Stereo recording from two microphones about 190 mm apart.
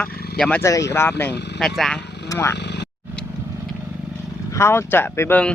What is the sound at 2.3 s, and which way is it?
Speech, 15° left (ahead or behind).